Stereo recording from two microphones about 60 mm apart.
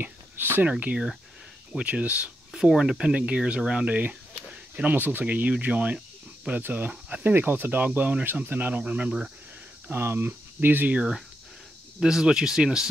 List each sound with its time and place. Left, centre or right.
0.0 s a sound: right
0.7 s speech: right
9.8 s speech: right
11.0 s speech: centre